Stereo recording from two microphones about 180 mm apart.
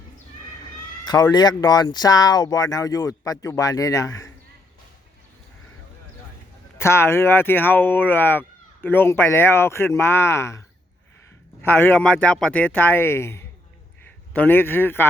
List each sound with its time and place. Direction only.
1.0 s speech: 20° left (ahead or behind)
6.7 s speech: 15° left (ahead or behind)
11.6 s speech: 10° left (ahead or behind)